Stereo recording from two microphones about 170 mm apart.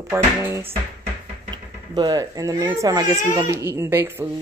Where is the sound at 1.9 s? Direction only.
20° right (ahead or behind).